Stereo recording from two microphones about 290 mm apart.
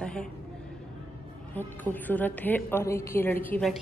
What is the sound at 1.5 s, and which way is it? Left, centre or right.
A woman's voice, centre.